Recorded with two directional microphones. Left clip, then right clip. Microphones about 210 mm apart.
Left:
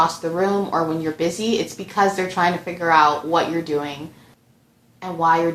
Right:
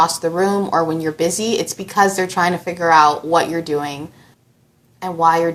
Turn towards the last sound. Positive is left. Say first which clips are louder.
# right 3 dB
turn(degrees=-25)  # may be behind; listen again after turning